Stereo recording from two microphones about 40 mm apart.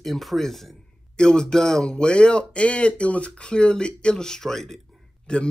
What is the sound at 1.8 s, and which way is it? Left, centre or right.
Speech, left.